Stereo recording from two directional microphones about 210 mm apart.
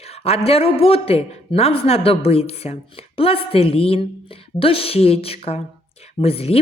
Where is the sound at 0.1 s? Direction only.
30° left (ahead or behind).